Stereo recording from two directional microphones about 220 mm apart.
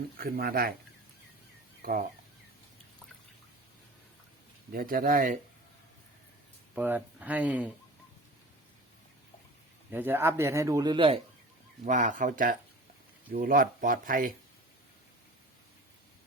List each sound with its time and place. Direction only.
0.2 s speech: 45° right (ahead or behind)
1.8 s speech: 40° right (ahead or behind)
4.7 s speech: 40° right (ahead or behind)
6.7 s a man's voice: 5° right (ahead or behind)
9.9 s a man's voice: 10° right (ahead or behind)
11.9 s speech: 35° right (ahead or behind)